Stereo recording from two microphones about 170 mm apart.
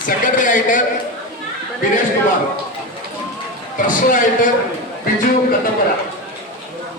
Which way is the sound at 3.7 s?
50° left (ahead or behind).